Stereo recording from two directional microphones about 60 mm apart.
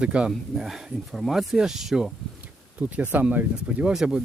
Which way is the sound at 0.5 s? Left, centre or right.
Centre.